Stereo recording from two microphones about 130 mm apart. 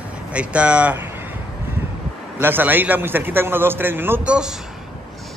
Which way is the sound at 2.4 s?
15° right (ahead or behind).